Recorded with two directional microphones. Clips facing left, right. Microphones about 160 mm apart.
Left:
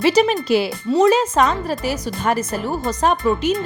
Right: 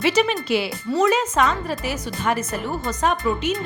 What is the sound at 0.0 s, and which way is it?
Speech, 35° left (ahead or behind).